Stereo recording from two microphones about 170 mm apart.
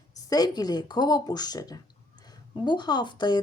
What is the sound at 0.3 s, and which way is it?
A woman's voice, 25° left (ahead or behind).